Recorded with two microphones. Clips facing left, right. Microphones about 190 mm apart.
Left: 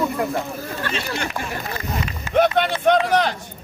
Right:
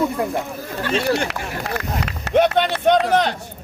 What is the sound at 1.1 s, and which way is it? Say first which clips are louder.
Speech: right 5 dB; 70° right (ahead or behind).